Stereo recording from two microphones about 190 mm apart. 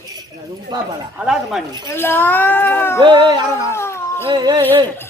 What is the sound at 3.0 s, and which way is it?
Speech, 25° right (ahead or behind).